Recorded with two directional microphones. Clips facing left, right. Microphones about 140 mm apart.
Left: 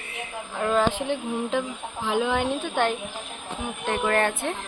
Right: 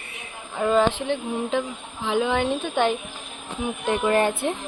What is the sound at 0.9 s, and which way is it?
A woman's voice, 5° left (ahead or behind).